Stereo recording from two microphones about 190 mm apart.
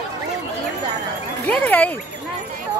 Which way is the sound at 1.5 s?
10° left (ahead or behind).